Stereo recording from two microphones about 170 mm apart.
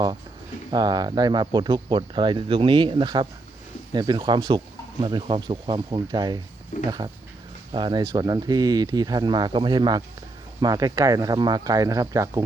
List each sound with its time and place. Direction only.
0.7 s speech: 25° right (ahead or behind)
6.7 s speech: 45° left (ahead or behind)
7.7 s speech: 25° right (ahead or behind)